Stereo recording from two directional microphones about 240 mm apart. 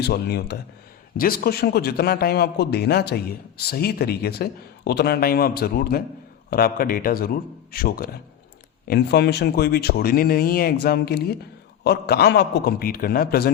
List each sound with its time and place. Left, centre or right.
0.0 s speech: left